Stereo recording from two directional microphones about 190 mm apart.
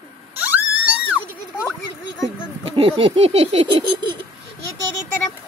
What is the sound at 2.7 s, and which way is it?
Speech, 25° right (ahead or behind).